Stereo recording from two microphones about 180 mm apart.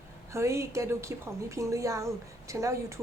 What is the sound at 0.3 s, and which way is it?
A woman's voice, 15° right (ahead or behind).